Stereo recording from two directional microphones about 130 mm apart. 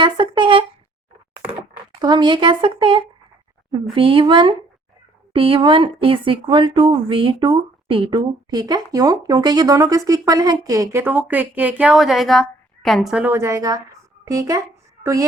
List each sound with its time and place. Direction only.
0.0 s a sound: 40° right (ahead or behind)
2.0 s a woman's voice: 35° right (ahead or behind)
11.0 s speech: 10° right (ahead or behind)
13.2 s speech: 20° right (ahead or behind)